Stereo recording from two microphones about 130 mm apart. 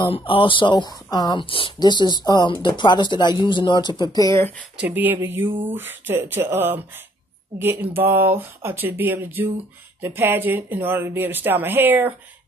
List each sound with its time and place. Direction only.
0.0 s speech: 40° left (ahead or behind)
1.4 s speech: 40° left (ahead or behind)
4.7 s speech: 15° right (ahead or behind)